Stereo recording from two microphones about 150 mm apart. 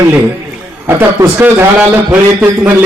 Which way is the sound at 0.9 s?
15° right (ahead or behind).